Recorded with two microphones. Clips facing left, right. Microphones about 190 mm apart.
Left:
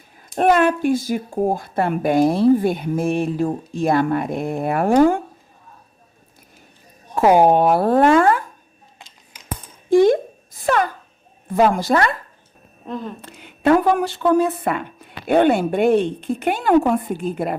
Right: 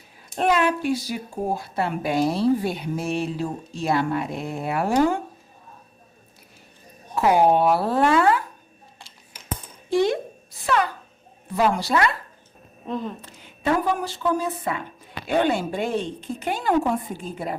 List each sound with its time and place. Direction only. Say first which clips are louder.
0.2 s a woman's voice: left 5 dB; 50° left (ahead or behind)
7.2 s a woman's voice: left 4 dB; 45° left (ahead or behind)
9.0 s scissors: left 3 dB; 15° left (ahead or behind)
9.9 s a sound: left 8 dB; 50° left (ahead or behind)
11.4 s a woman's voice: left 5 dB; 50° left (ahead or behind)
12.8 s a woman's voice: even; centre (ahead or behind)
13.2 s speech: left 11 dB; 65° left (ahead or behind)